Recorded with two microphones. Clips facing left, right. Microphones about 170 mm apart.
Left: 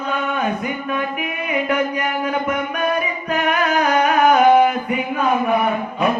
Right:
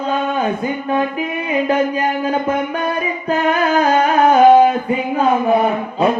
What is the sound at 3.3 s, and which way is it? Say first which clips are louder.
Music: right 4 dB; 25° right (ahead or behind).